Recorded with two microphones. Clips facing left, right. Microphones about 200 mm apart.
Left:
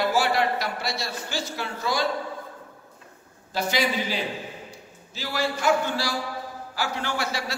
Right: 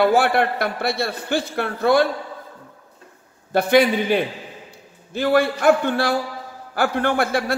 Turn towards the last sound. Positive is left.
turn(degrees=-55)  # may be behind; listen again after turning